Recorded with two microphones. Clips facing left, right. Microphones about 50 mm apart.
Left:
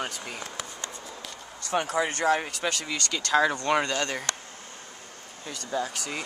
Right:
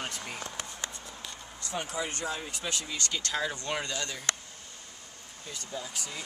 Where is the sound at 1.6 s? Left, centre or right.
Left.